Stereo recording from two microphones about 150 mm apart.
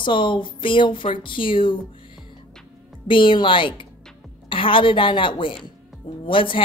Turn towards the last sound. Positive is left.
turn(degrees=35)  # may be behind; listen again after turning